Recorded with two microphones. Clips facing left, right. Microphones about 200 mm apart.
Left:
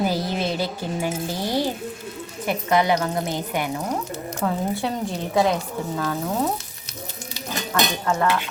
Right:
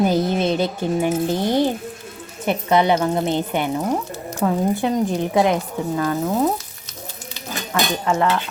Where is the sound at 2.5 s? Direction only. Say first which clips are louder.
Right 3 dB; 25° right (ahead or behind).